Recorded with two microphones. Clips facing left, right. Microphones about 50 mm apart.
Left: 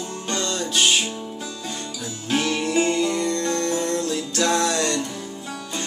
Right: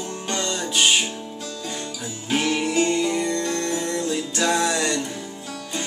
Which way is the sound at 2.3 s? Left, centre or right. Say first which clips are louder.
Even; centre.